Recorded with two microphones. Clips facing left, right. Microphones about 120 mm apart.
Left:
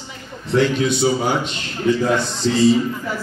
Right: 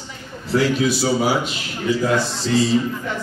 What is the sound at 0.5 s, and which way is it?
A man's voice, 5° right (ahead or behind).